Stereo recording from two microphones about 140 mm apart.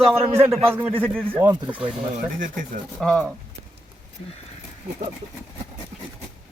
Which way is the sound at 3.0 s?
5° left (ahead or behind).